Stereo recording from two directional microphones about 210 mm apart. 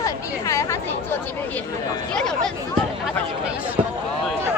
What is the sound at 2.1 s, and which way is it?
Speech, 5° left (ahead or behind).